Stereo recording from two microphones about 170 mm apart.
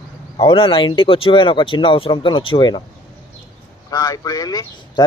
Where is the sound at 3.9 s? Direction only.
20° left (ahead or behind).